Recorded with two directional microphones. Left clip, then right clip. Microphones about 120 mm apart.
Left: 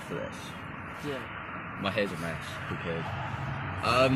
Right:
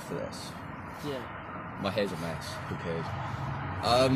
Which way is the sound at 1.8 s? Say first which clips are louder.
Left 1 dB; 20° right (ahead or behind).